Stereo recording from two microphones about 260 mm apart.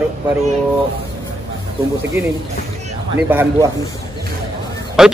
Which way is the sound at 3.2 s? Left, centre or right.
Centre.